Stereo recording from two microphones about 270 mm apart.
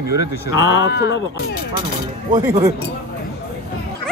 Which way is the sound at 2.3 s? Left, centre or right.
Centre.